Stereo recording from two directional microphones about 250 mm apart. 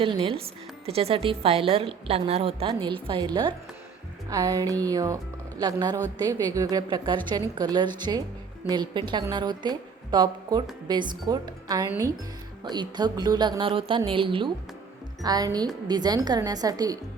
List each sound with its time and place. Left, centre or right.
0.0 s a woman's voice: right